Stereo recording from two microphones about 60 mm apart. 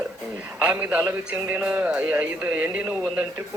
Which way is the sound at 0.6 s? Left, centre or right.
Right.